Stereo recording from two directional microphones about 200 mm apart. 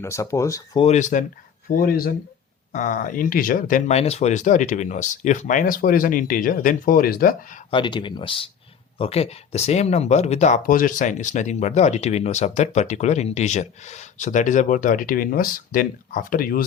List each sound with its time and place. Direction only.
0.0 s speech: 15° left (ahead or behind)
0.9 s speech: 35° left (ahead or behind)
7.7 s speech: 25° left (ahead or behind); by 16.6 s 45° left (ahead or behind)